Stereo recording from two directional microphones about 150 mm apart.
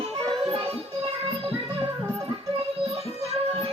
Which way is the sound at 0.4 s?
40° right (ahead or behind).